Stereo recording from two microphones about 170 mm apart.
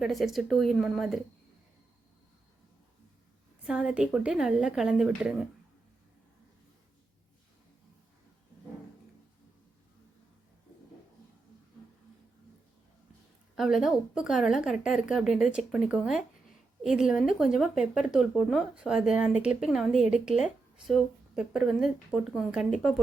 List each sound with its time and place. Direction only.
0.0 s speech: centre (ahead or behind)
3.7 s speech: 5° right (ahead or behind)
13.6 s speech: centre (ahead or behind)